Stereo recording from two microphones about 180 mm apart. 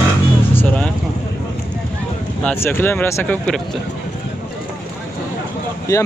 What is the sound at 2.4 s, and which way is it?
Speech, 10° left (ahead or behind).